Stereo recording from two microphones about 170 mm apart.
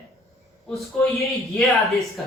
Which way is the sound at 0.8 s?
Centre (ahead or behind).